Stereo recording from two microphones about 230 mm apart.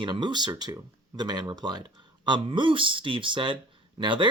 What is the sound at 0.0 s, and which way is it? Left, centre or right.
Speech, centre.